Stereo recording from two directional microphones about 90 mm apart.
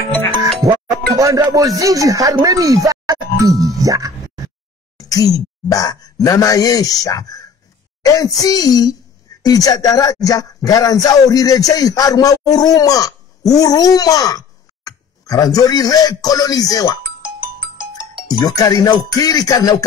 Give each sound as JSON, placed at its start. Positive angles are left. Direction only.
{"t": 0.6, "sound": "music", "side_deg": -40}
{"t": 4.9, "sound": "speech", "side_deg": 40}
{"t": 8.0, "sound": "music", "side_deg": 45}
{"t": 9.4, "sound": "speech", "side_deg": 45}
{"t": 17.2, "sound": "music", "side_deg": -10}
{"t": 18.4, "sound": "music", "side_deg": 45}